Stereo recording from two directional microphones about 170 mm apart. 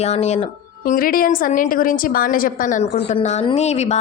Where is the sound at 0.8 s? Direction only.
55° left (ahead or behind).